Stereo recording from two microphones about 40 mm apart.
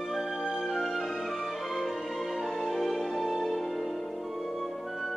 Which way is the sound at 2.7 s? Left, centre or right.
Centre.